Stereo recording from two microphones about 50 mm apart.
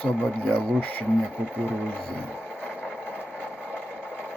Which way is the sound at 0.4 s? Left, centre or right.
Left.